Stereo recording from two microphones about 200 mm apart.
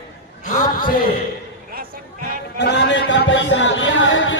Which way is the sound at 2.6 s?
60° left (ahead or behind).